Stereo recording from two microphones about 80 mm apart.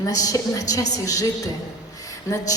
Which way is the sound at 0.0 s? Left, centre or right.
Left.